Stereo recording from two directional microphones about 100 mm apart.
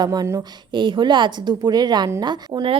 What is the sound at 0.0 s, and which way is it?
A woman's voice, 40° right (ahead or behind).